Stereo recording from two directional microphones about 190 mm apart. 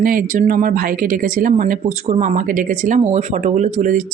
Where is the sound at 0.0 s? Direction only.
50° right (ahead or behind).